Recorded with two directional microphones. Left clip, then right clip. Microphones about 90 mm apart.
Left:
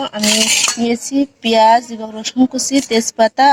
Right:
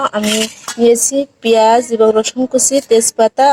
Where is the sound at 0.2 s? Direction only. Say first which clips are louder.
Left 1 dB; 35° left (ahead or behind).